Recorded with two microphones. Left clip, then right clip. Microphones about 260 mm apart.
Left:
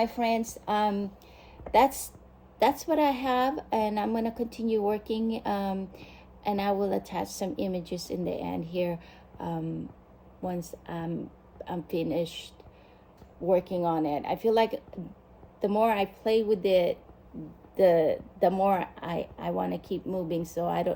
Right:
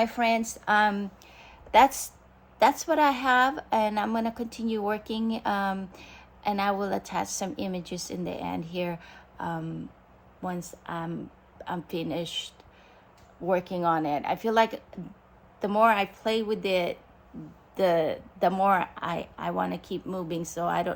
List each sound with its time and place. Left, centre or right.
0.0 s speech: right
5.9 s a sound: centre
6.8 s speech: centre
9.5 s a sound: right
10.5 s speech: centre
10.9 s speech: right
11.6 s speech: centre
15.8 s speech: centre